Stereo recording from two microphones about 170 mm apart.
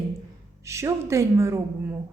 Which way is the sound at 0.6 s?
15° right (ahead or behind).